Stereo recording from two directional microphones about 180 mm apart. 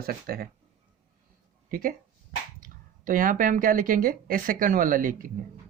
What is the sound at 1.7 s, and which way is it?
Speech, 50° right (ahead or behind).